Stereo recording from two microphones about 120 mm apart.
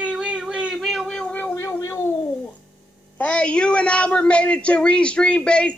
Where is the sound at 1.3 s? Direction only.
20° left (ahead or behind).